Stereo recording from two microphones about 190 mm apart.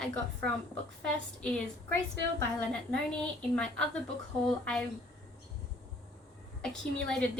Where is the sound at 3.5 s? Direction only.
5° left (ahead or behind).